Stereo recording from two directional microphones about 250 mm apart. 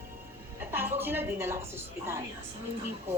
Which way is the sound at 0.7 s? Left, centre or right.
Centre.